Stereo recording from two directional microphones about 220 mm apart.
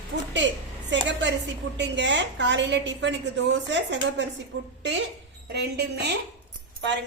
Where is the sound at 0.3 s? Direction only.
55° right (ahead or behind).